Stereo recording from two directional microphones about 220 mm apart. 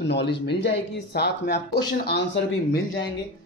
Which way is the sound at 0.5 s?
50° left (ahead or behind).